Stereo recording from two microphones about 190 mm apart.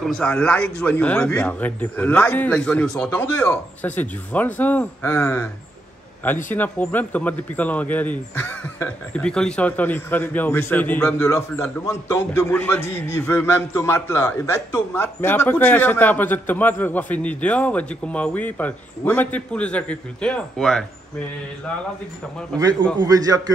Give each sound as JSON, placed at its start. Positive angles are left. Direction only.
{"t": 0.0, "sound": "speech", "side_deg": 5}
{"t": 6.5, "sound": "speech", "side_deg": 10}
{"t": 22.6, "sound": "a man's voice", "side_deg": -20}